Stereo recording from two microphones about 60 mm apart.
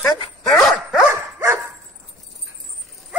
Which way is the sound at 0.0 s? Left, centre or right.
Left.